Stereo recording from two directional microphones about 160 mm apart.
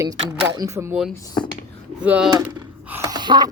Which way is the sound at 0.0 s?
25° right (ahead or behind).